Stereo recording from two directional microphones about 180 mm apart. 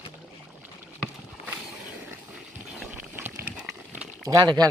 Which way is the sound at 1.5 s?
10° right (ahead or behind).